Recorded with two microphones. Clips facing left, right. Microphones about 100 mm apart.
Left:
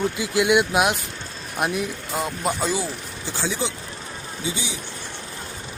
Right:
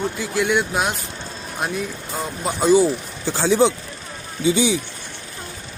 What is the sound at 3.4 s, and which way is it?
Speech, 60° right (ahead or behind).